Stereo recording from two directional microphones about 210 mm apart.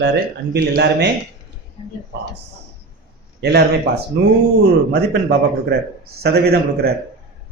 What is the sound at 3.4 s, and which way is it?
Speech, 50° right (ahead or behind).